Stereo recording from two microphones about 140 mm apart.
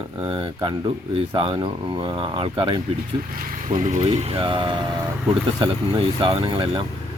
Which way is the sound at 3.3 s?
80° right.